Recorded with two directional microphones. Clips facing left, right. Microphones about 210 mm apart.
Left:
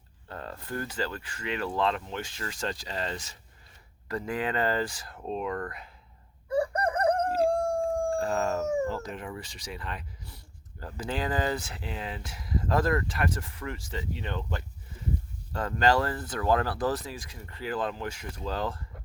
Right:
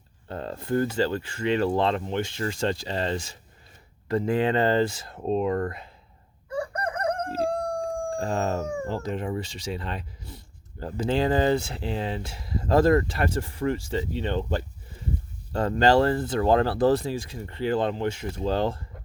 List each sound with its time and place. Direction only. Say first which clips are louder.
0.3 s speech: right 9 dB; 25° right (ahead or behind)
6.5 s crowing: left 3 dB; 30° left (ahead or behind)
8.1 s speech: right 1 dB; 30° right (ahead or behind)